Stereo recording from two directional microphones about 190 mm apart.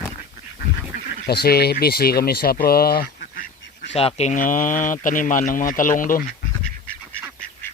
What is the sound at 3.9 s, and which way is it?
Speech, 35° left (ahead or behind).